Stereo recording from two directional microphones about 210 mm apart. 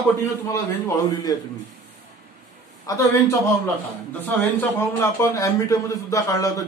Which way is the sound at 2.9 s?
15° left (ahead or behind).